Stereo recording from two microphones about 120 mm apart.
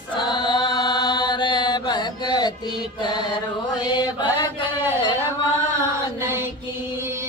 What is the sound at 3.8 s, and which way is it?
Mantra, 35° left (ahead or behind).